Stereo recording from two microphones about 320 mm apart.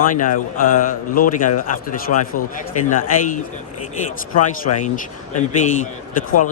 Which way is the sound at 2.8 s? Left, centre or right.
Left.